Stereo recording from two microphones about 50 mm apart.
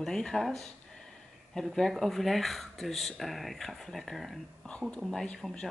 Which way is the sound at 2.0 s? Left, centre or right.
Centre.